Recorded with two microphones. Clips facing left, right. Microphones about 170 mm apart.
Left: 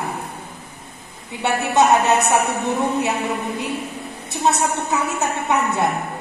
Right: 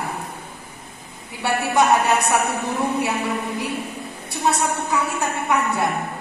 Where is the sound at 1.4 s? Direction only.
20° left (ahead or behind).